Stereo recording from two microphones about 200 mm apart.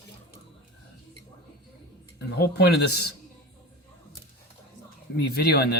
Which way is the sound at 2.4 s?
55° left (ahead or behind).